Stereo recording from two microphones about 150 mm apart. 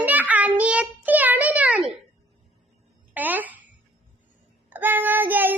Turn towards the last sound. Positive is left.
turn(degrees=-10)  # may be behind; listen again after turning